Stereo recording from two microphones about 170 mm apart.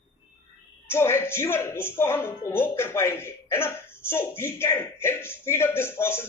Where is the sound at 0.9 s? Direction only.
15° left (ahead or behind).